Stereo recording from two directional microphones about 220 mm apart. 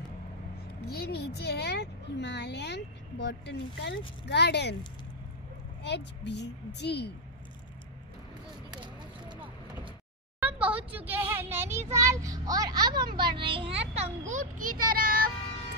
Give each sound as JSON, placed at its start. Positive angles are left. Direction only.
{"t": 0.8, "sound": "a child's voice", "side_deg": 45}
{"t": 5.8, "sound": "a child's voice", "side_deg": 50}
{"t": 10.4, "sound": "speech", "side_deg": -5}